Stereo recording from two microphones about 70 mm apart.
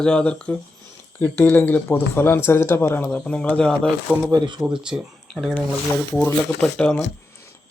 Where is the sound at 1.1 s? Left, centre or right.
Left.